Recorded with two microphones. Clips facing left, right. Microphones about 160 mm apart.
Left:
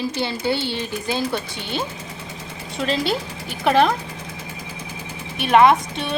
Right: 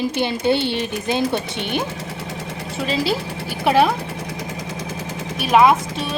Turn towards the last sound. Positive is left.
turn(degrees=0)  # may be behind; listen again after turning